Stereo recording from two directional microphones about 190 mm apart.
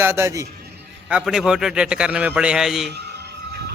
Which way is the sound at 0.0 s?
15° right (ahead or behind).